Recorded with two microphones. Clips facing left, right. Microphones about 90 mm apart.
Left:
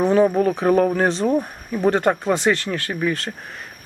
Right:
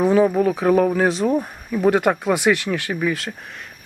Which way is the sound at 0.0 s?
Centre (ahead or behind).